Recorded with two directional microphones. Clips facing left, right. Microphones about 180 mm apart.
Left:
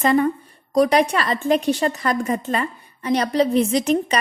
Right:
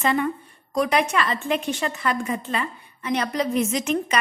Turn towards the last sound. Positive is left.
turn(degrees=35)  # may be behind; listen again after turning